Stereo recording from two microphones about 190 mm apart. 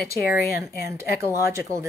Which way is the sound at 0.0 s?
55° left (ahead or behind).